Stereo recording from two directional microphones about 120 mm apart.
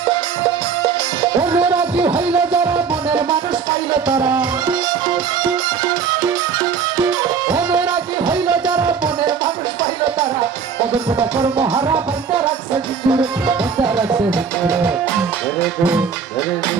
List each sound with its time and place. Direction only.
1.5 s music: 10° right (ahead or behind)
11.2 s music: 40° right (ahead or behind)